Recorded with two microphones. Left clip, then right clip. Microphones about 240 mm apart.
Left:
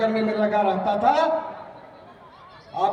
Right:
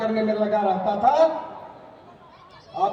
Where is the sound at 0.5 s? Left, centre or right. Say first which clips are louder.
Left 1 dB; left.